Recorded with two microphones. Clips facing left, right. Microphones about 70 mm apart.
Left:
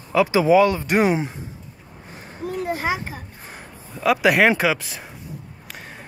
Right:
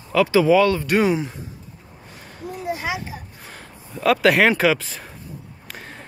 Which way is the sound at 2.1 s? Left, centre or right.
Left.